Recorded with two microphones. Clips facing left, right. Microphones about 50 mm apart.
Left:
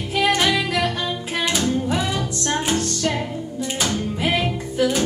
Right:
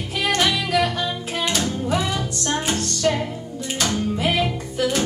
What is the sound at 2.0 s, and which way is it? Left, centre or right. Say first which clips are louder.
Music: even; centre.